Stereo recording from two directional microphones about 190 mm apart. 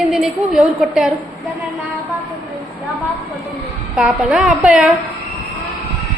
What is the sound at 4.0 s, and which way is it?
Speech, 5° right (ahead or behind).